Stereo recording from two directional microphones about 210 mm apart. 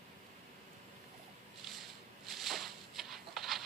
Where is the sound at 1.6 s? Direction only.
Centre (ahead or behind).